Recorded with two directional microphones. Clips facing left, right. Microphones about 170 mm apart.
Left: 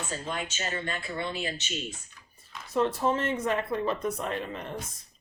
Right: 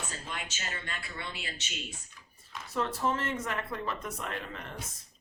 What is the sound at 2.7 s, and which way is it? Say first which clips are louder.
A woman's voice: left 5 dB; 20° left (ahead or behind).